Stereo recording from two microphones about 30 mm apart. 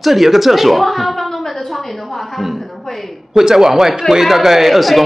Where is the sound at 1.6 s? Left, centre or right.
Centre.